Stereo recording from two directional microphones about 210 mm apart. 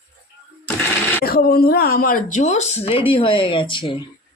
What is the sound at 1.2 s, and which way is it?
Speech, 45° left (ahead or behind).